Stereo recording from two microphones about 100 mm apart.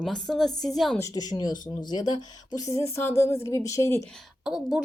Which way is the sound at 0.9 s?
35° left (ahead or behind).